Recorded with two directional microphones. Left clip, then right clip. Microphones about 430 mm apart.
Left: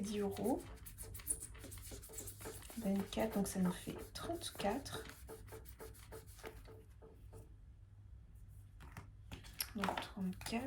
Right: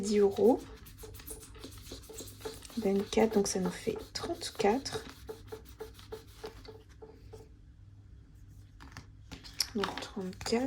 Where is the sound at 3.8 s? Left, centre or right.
Right.